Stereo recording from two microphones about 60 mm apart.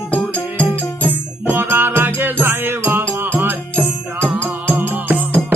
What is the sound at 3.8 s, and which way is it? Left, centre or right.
Music, right.